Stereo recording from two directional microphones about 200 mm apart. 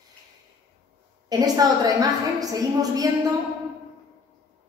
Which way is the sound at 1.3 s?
20° right (ahead or behind).